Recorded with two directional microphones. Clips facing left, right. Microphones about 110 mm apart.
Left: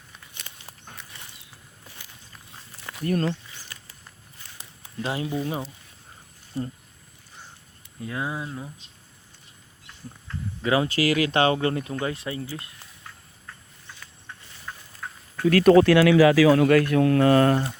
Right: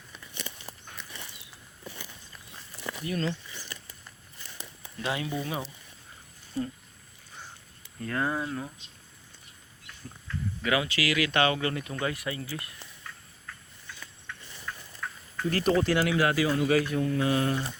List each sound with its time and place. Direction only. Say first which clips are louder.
3.0 s speech: left 6 dB; 50° left (ahead or behind)
5.0 s speech: left 3 dB; 30° left (ahead or behind)
8.0 s speech: right 1 dB; 10° left (ahead or behind)
9.8 s a sound: left 2 dB; 30° left (ahead or behind)
10.8 s speech: left 6 dB; 40° left (ahead or behind); by 12.7 s 25° left (ahead or behind)
14.3 s a sound: even; 30° left (ahead or behind)
15.4 s a man's voice: left 10 dB; 70° left (ahead or behind)